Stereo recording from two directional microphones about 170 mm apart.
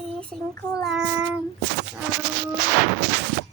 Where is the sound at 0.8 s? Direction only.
5° right (ahead or behind).